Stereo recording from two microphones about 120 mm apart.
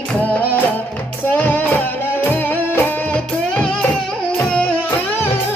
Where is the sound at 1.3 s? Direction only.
15° left (ahead or behind).